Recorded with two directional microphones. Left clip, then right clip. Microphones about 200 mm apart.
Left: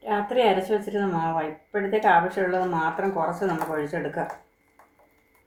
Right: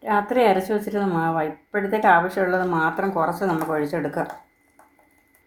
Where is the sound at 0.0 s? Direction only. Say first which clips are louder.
Right 3 dB; 30° right (ahead or behind).